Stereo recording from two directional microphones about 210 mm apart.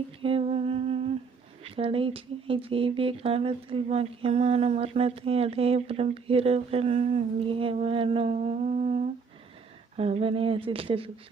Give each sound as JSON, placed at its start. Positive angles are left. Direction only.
{"t": 0.2, "sound": "humming", "side_deg": -25}
{"t": 1.6, "sound": "speech", "side_deg": -25}